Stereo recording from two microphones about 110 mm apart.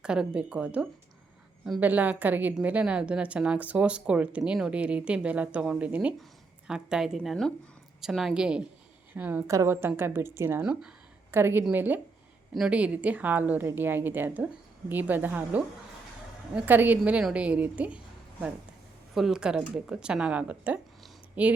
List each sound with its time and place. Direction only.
0.0 s a woman's voice: 5° right (ahead or behind)
9.5 s a woman's voice: 25° right (ahead or behind)
10.6 s a woman's voice: 5° right (ahead or behind)
11.3 s a woman's voice: 20° right (ahead or behind)